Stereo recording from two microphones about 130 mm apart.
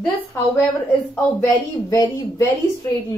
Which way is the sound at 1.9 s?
25° left (ahead or behind).